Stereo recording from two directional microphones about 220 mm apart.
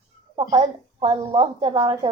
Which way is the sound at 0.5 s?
25° right (ahead or behind).